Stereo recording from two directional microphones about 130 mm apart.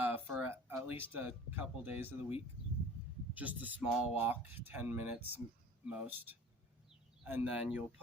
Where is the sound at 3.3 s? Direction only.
10° right (ahead or behind).